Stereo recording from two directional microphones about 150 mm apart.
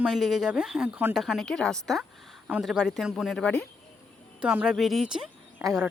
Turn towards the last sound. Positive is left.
turn(degrees=-10)  # may be behind; listen again after turning